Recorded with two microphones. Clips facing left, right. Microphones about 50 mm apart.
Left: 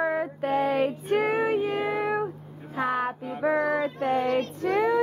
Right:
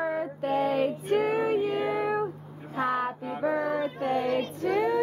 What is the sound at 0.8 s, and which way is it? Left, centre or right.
Child singing, left.